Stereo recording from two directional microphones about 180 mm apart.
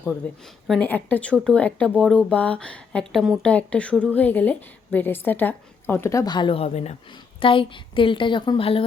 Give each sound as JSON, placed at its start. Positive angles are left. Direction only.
{"t": 0.2, "sound": "a woman's voice", "side_deg": 10}